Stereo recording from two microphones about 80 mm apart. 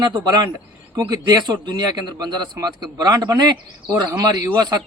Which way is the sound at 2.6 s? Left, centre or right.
Right.